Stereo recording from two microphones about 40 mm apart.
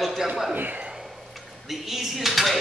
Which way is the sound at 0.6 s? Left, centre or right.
Right.